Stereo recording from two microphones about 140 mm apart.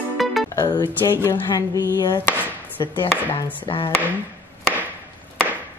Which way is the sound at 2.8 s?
30° left (ahead or behind).